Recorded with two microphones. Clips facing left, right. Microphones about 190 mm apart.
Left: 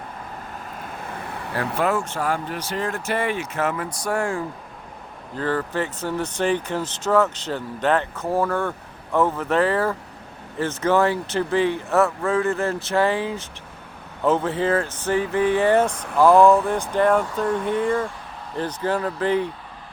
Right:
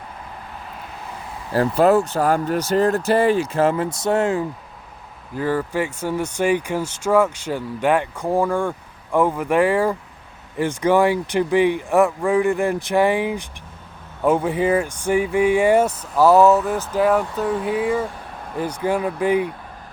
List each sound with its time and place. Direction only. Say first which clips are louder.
0.8 s vehicle: left 4 dB; 55° left (ahead or behind)
1.5 s speech: right 8 dB; 35° right (ahead or behind); by 19.5 s 10° right (ahead or behind)